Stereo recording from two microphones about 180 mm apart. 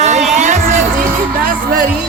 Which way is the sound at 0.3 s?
40° right (ahead or behind).